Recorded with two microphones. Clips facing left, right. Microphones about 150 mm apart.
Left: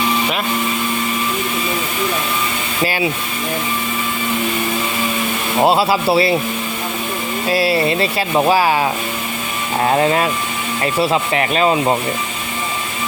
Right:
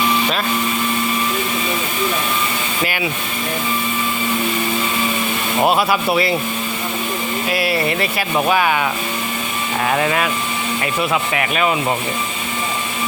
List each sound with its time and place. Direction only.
5.6 s speech: 25° left (ahead or behind)
7.5 s speech: 30° left (ahead or behind)